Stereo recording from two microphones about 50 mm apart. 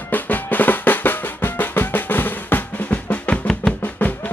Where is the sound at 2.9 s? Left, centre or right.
Left.